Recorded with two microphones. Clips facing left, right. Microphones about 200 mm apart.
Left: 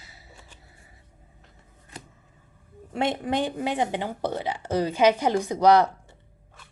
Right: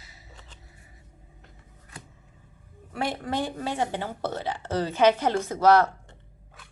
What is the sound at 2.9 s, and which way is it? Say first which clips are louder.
Speech: left 4 dB; 20° left (ahead or behind).